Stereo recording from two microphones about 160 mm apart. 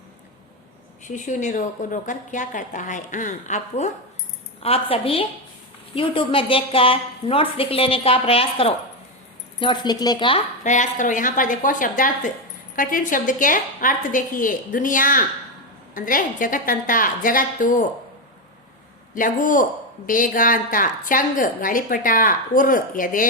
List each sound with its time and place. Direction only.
1.0 s speech: 50° left (ahead or behind)
4.6 s a woman's voice: 35° left (ahead or behind)
10.6 s a woman's voice: 50° left (ahead or behind)
19.1 s a woman's voice: 55° left (ahead or behind)